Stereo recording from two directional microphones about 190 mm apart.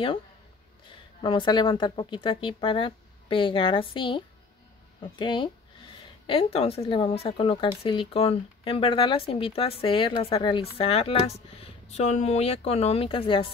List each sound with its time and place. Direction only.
1.2 s speech: 25° left (ahead or behind)
5.2 s speech: 25° left (ahead or behind)